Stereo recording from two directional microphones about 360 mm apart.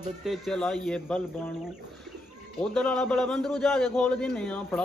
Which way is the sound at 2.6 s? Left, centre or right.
Centre.